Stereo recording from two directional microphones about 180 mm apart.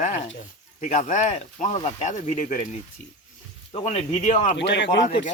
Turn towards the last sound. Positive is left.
turn(degrees=85)